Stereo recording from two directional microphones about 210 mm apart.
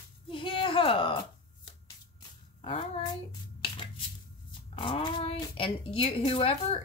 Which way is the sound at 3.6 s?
25° left (ahead or behind).